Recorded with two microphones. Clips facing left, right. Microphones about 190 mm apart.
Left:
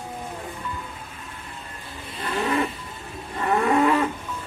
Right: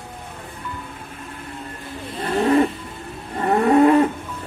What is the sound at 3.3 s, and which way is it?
Moo, 40° right (ahead or behind).